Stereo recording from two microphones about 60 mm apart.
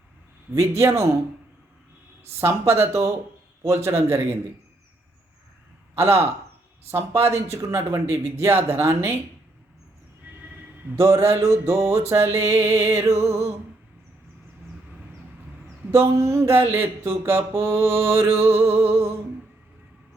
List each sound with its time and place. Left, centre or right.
0.5 s a man's voice: right
2.4 s mantra: right
5.9 s a man's voice: right
6.9 s mantra: right
10.9 s mantra: right
15.9 s mantra: right